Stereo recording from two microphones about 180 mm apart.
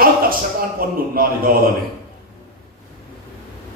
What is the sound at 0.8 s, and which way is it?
Speech, 55° right (ahead or behind).